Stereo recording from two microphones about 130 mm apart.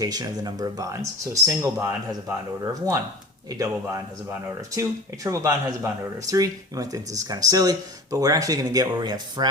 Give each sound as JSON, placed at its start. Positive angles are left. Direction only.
{"t": 0.0, "sound": "speech", "side_deg": -30}